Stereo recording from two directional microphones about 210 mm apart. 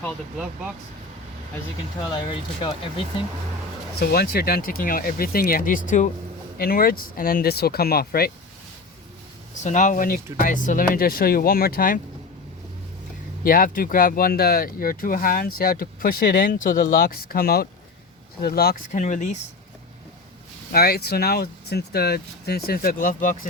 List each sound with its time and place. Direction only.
2.1 s speech: 25° left (ahead or behind)
4.0 s speech: 50° left (ahead or behind)
9.6 s speech: 35° left (ahead or behind)
13.4 s speech: 45° left (ahead or behind)
18.9 s speech: 35° left (ahead or behind)
20.7 s speech: 50° left (ahead or behind)